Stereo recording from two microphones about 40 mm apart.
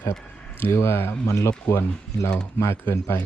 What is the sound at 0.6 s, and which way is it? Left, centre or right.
Speech, left.